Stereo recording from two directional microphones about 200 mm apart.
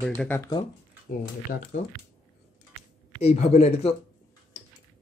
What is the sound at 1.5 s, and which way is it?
Speech, 40° left (ahead or behind).